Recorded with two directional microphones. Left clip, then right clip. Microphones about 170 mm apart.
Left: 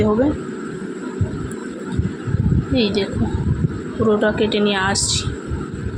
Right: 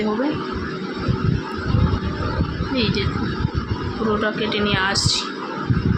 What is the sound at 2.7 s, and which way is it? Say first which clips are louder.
Speech: left 3 dB; 30° left (ahead or behind).